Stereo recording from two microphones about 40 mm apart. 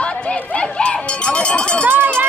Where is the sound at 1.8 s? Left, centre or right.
Right.